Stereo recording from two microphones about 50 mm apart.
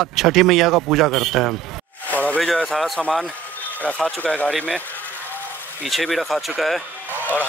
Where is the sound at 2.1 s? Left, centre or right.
Left.